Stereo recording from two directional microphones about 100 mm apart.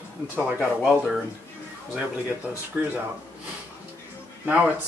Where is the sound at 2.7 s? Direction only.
15° right (ahead or behind).